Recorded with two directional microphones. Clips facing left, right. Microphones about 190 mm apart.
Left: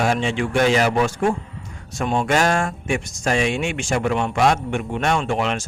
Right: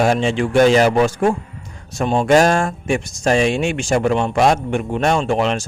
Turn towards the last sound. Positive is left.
turn(degrees=-35)  # may be behind; listen again after turning